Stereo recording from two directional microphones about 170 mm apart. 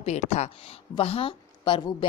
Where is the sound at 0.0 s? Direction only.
40° left (ahead or behind).